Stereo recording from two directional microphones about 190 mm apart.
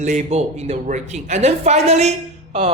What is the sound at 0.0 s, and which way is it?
Speech, 35° right (ahead or behind).